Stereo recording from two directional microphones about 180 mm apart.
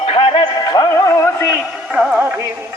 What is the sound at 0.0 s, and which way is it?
Music, 30° left (ahead or behind).